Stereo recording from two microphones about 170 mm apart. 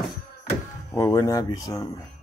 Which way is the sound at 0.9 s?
15° left (ahead or behind).